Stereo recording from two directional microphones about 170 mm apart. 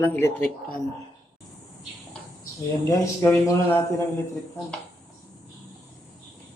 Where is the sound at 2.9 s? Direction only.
20° left (ahead or behind).